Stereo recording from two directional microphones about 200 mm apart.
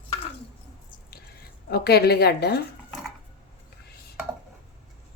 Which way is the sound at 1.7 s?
55° left (ahead or behind).